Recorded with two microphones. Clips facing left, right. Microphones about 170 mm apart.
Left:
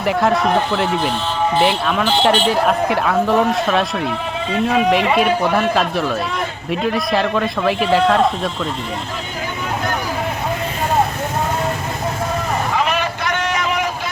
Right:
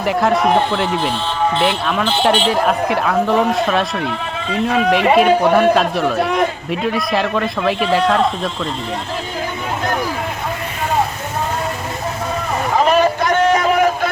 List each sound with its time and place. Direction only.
0.0 s speech: centre (ahead or behind)
6.1 s a man's voice: 60° right (ahead or behind)
6.7 s speech: centre (ahead or behind)
12.7 s vehicle: 40° right (ahead or behind)